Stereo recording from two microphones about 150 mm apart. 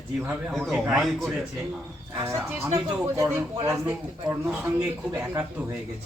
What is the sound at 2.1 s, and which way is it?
Speech, 15° right (ahead or behind).